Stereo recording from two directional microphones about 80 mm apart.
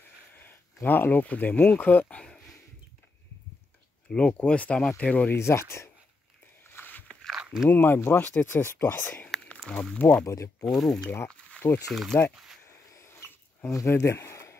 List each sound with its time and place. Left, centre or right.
0.3 s speech: left
4.1 s speech: centre
5.3 s speech: left
6.7 s biting: left
7.3 s biting: centre
7.7 s speech: left
10.2 s speech: left
10.6 s speech: centre
11.2 s a sound: centre
11.9 s speech: centre
12.6 s a sound: left